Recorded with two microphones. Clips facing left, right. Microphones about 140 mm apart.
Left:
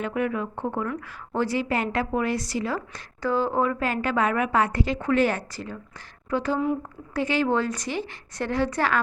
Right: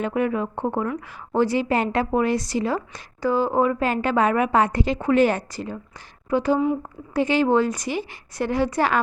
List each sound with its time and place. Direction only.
0.0 s a woman's voice: 25° right (ahead or behind)
3.2 s a woman's voice: 10° right (ahead or behind)